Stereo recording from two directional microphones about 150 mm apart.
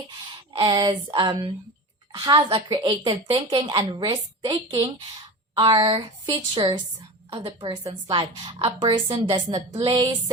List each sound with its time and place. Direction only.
0.5 s a woman's voice: 35° right (ahead or behind)